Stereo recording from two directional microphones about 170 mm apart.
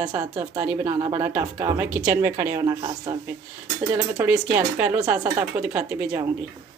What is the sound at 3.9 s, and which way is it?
Speech, 10° right (ahead or behind).